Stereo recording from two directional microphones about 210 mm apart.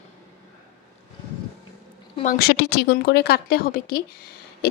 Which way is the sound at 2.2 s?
50° left (ahead or behind).